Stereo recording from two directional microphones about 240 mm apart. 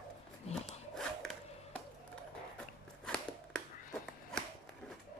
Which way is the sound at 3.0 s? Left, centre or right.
Centre.